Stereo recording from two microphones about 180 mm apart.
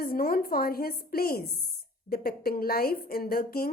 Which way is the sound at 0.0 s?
55° left (ahead or behind).